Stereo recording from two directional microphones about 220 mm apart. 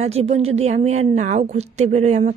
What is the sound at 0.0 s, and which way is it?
A woman's voice, 30° right (ahead or behind).